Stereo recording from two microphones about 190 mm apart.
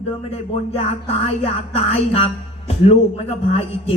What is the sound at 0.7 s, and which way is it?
Music, 30° left (ahead or behind).